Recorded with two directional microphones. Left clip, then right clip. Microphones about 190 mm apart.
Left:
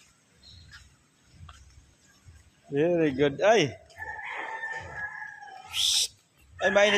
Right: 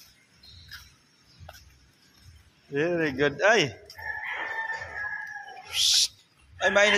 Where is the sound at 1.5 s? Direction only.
60° right (ahead or behind).